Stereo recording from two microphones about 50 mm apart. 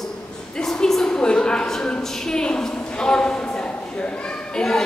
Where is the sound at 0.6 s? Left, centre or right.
Centre.